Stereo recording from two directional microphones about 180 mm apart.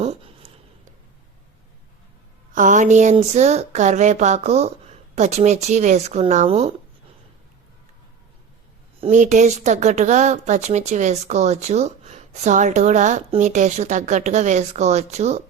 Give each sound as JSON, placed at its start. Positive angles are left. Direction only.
{"t": 0.0, "sound": "a sound", "side_deg": -35}
{"t": 2.5, "sound": "a woman's voice", "side_deg": -45}
{"t": 9.0, "sound": "a woman's voice", "side_deg": -40}